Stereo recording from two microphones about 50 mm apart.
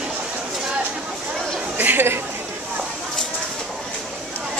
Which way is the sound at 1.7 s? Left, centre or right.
Right.